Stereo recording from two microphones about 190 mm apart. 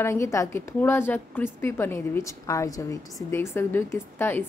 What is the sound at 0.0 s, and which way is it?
A woman's voice, 15° left (ahead or behind).